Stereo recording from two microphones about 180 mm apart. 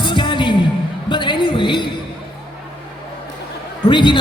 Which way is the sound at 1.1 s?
25° left (ahead or behind).